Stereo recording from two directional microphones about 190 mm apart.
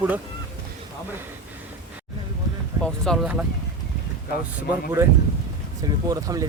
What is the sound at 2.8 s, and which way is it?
Speech, 5° left (ahead or behind).